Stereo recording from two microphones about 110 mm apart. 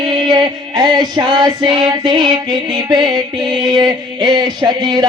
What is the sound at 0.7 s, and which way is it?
Music, 40° right (ahead or behind).